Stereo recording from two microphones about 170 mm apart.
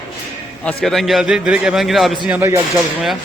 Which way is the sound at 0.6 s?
5° left (ahead or behind).